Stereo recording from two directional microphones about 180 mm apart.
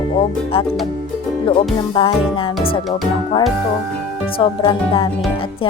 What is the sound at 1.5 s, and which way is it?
Music, 30° left (ahead or behind).